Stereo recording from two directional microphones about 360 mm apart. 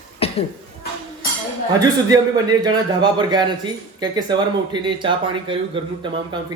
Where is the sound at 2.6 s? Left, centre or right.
Centre.